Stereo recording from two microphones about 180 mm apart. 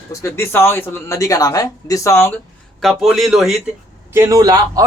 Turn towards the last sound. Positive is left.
turn(degrees=-20)  # may be behind; listen again after turning